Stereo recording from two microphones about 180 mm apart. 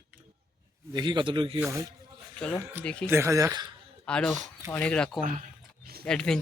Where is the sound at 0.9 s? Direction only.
25° right (ahead or behind).